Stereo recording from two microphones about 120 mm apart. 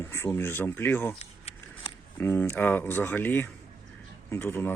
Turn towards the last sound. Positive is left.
turn(degrees=15)  # may be behind; listen again after turning